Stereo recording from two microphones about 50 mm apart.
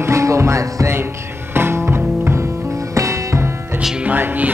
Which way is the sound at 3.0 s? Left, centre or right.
Right.